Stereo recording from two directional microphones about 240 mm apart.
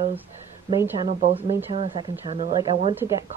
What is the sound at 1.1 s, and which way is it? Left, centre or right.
Speech, right.